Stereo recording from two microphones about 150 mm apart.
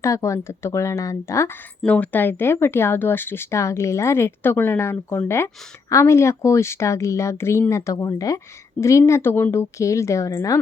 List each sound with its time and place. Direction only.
0.0 s speech: 20° left (ahead or behind)